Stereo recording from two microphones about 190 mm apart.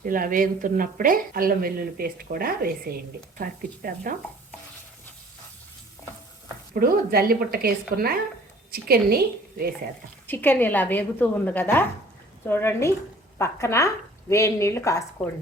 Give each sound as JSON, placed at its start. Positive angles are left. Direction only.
{"t": 0.0, "sound": "speech", "side_deg": -45}
{"t": 6.7, "sound": "speech", "side_deg": -50}
{"t": 10.2, "sound": "speech", "side_deg": 10}